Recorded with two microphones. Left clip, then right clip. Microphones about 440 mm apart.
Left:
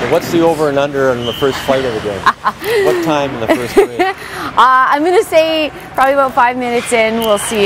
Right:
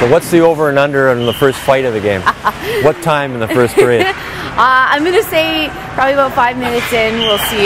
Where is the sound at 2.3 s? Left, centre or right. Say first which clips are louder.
Left 5 dB; left.